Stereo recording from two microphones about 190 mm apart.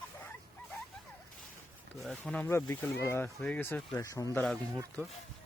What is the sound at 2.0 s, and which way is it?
Speech, centre (ahead or behind).